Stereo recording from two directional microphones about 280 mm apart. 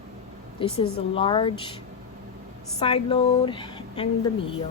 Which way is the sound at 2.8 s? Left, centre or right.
Centre.